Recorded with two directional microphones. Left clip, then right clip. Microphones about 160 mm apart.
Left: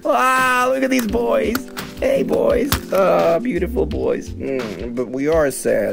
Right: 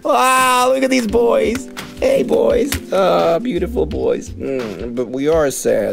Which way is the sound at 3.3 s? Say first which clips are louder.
Right 1 dB; 20° right (ahead or behind).